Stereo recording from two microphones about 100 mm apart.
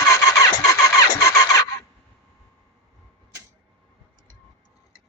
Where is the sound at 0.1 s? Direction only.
35° left (ahead or behind).